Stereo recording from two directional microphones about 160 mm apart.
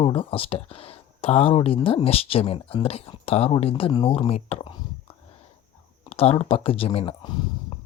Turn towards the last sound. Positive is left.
turn(degrees=30)  # may be behind; listen again after turning